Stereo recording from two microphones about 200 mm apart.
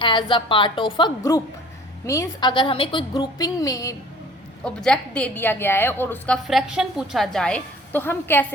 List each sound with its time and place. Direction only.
0.0 s a woman's voice: 25° left (ahead or behind)
4.6 s a woman's voice: 5° left (ahead or behind)